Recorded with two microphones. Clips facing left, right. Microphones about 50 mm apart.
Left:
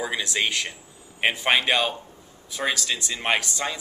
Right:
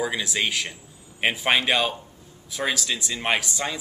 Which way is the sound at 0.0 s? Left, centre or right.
Centre.